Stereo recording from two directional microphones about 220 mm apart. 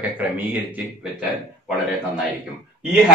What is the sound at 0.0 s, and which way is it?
Speech, 5° right (ahead or behind).